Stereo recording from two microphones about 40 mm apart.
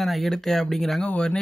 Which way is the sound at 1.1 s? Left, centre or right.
Left.